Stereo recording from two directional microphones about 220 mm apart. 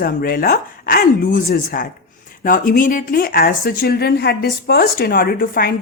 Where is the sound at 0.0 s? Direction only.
40° left (ahead or behind).